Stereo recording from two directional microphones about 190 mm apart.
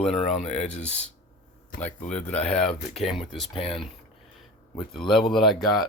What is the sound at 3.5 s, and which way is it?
Speech, 30° left (ahead or behind).